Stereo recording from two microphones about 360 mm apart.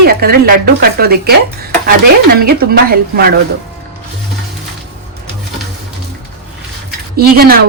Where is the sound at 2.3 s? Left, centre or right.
Right.